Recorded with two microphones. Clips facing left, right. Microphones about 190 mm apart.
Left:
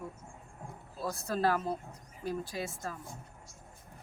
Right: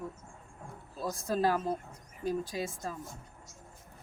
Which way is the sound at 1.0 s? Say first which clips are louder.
Right 1 dB; 15° right (ahead or behind).